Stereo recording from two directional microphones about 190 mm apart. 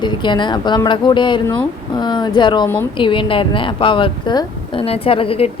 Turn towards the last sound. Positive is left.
turn(degrees=30)  # may be behind; listen again after turning